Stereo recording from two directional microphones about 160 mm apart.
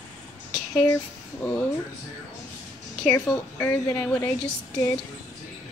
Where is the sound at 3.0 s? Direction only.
5° left (ahead or behind).